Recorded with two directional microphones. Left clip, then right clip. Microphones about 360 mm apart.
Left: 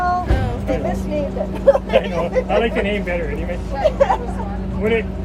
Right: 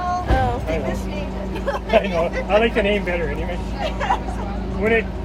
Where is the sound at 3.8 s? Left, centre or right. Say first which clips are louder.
Left 7 dB; left.